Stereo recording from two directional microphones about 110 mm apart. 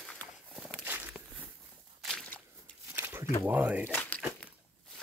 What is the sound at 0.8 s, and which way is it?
Walk, 15° right (ahead or behind).